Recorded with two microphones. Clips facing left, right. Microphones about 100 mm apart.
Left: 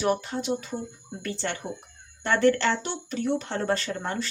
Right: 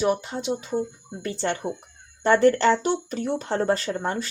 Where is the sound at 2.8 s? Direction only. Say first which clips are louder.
Right 4 dB; 40° right (ahead or behind); by 4.2 s 25° right (ahead or behind).